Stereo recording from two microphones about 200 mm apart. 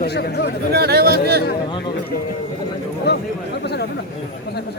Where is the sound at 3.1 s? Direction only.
55° left (ahead or behind).